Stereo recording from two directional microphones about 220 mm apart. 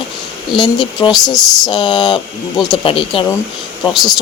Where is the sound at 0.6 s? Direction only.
20° left (ahead or behind).